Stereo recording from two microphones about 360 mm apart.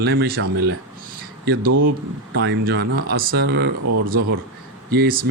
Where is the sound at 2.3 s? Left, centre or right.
Right.